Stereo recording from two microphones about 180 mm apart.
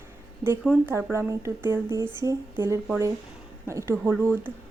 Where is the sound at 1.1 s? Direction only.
15° right (ahead or behind).